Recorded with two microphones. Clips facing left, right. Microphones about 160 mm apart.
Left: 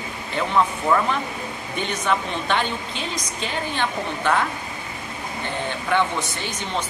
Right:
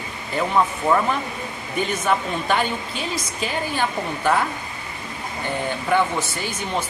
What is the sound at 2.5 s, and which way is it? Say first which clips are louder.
Speech: right 2 dB; 5° right (ahead or behind).